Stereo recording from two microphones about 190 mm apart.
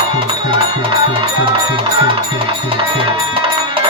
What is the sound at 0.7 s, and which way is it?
Music, 30° right (ahead or behind).